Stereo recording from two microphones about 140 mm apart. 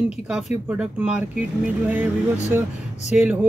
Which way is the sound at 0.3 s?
5° right (ahead or behind).